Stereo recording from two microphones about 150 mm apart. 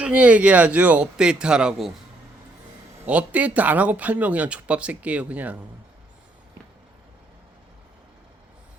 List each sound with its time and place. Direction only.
0.0 s speech: 10° right (ahead or behind)
3.1 s speech: 10° right (ahead or behind)